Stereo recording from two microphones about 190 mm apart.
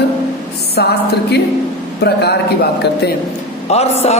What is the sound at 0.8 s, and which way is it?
Speech, 60° left (ahead or behind).